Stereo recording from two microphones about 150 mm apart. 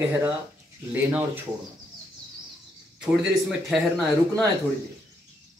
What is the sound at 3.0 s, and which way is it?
Speech, centre (ahead or behind).